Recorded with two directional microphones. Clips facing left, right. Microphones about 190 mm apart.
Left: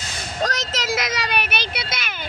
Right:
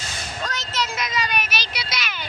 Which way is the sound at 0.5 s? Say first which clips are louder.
Left 3 dB; 90° left.